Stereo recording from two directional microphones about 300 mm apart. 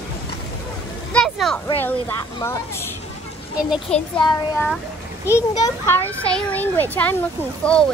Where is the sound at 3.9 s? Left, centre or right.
Centre.